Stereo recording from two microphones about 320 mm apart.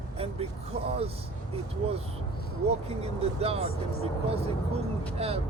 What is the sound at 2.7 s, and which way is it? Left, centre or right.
Speech, centre.